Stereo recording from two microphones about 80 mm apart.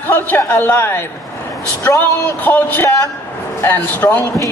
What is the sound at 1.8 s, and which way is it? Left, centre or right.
Speech, left.